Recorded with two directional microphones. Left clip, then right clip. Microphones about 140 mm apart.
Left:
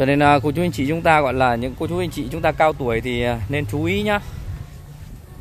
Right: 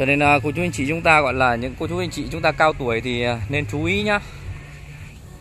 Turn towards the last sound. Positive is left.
turn(degrees=10)  # may be behind; listen again after turning